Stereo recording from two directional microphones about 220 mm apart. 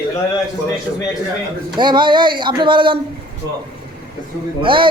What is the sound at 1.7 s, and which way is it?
Speech, 20° right (ahead or behind).